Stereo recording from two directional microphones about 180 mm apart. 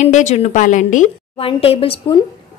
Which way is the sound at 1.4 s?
30° left (ahead or behind).